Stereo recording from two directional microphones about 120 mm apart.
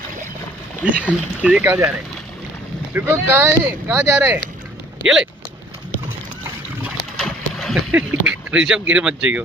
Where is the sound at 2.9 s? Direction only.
15° right (ahead or behind).